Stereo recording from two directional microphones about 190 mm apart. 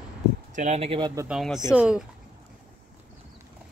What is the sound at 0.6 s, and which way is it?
Speech, 35° right (ahead or behind).